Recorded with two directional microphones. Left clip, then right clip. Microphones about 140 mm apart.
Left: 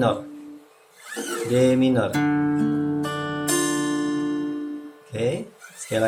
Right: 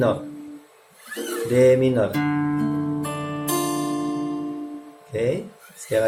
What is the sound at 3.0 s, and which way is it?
Music, 55° left (ahead or behind).